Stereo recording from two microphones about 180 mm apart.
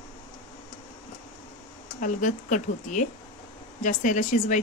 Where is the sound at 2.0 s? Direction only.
45° left (ahead or behind).